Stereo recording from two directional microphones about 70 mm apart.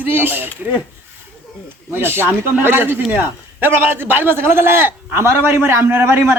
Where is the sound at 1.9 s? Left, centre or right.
Right.